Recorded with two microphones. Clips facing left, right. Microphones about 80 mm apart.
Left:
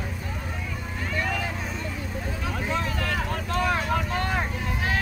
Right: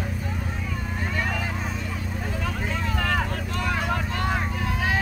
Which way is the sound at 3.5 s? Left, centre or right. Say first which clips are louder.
Left 2 dB; centre.